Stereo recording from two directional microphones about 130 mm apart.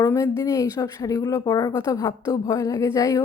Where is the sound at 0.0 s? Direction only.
25° left (ahead or behind).